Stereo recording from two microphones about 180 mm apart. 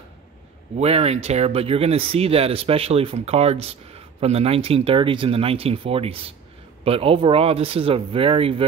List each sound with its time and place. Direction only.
0.7 s speech: 35° right (ahead or behind)